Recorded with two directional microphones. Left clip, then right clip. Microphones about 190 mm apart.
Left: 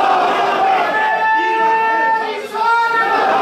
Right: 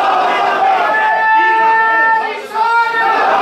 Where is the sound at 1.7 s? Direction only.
5° left (ahead or behind).